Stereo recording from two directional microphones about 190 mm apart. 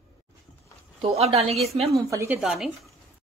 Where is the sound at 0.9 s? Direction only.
30° right (ahead or behind).